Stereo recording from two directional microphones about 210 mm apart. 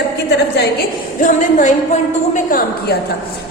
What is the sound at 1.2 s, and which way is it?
A woman's voice, 35° left (ahead or behind).